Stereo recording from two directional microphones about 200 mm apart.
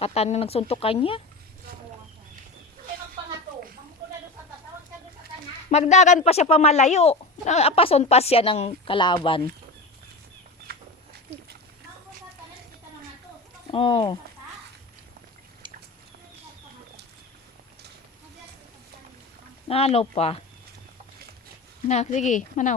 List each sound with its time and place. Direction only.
0.0 s speech: 30° left (ahead or behind)
5.7 s speech: 35° left (ahead or behind)
10.7 s a sound: 50° right (ahead or behind)
13.7 s speech: 25° left (ahead or behind)
19.6 s speech: 30° left (ahead or behind)
21.8 s speech: 35° left (ahead or behind)